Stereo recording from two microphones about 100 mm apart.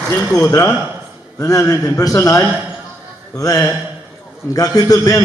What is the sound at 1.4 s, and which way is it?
A man's voice, 35° left (ahead or behind).